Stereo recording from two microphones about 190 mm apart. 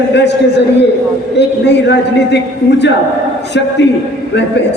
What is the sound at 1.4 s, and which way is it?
A man's voice, 65° left (ahead or behind).